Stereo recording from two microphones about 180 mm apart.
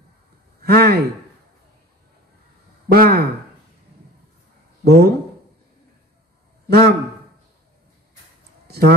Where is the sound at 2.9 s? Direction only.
55° right (ahead or behind).